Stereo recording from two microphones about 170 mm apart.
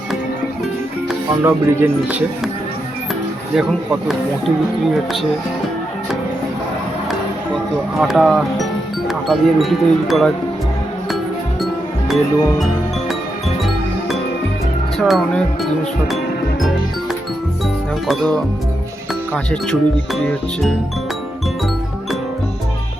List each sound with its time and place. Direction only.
1.5 s speech: 10° right (ahead or behind)
3.5 s speech: centre (ahead or behind)
7.9 s speech: centre (ahead or behind)
11.6 s music: centre (ahead or behind)
14.9 s speech: centre (ahead or behind)
18.1 s speech: 5° left (ahead or behind)